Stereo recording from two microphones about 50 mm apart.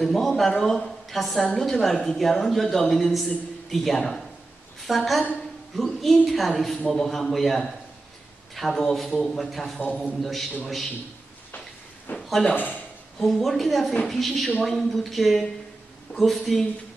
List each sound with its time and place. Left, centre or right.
0.0 s a woman's voice: centre
9.8 s a man's voice: left
10.0 s a woman's voice: centre
12.2 s a sound: centre
13.2 s a woman's voice: centre